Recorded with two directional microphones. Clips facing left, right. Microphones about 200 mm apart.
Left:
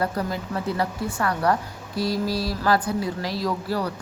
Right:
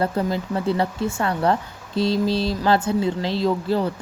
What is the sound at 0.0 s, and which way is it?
Speech, 25° right (ahead or behind).